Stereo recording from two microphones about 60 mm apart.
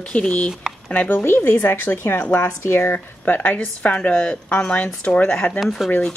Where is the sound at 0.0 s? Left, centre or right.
Centre.